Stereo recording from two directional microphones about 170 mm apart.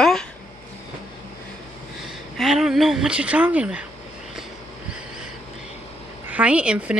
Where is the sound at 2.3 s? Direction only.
Centre (ahead or behind).